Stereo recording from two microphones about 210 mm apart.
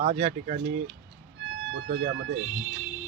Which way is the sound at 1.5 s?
55° right (ahead or behind).